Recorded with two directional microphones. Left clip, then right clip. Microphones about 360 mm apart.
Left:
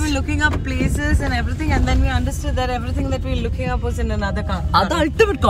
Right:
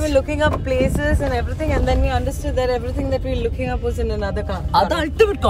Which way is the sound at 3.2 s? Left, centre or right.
Centre.